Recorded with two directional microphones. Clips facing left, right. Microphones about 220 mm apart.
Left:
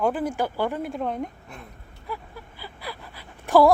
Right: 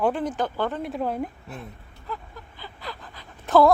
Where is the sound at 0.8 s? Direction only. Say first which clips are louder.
Right 1 dB; centre (ahead or behind).